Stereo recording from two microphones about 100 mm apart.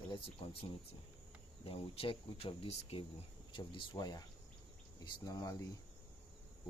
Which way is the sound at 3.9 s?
40° left (ahead or behind).